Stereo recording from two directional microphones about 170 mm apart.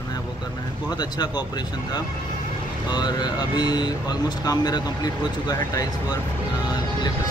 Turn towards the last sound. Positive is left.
turn(degrees=25)  # may be behind; listen again after turning